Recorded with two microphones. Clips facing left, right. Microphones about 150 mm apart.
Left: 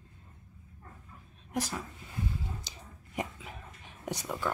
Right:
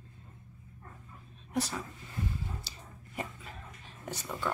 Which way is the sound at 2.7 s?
15° left (ahead or behind).